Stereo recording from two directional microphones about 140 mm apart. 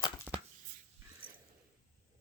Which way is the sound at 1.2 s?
90° right.